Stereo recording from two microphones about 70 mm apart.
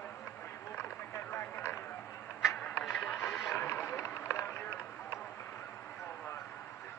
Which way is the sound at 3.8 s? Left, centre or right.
Left.